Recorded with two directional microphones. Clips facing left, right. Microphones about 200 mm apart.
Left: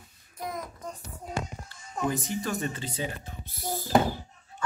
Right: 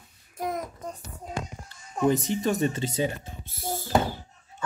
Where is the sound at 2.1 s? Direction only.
20° right (ahead or behind).